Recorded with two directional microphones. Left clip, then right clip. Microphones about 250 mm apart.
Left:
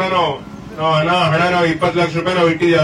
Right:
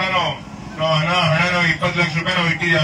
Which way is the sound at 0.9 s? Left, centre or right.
Left.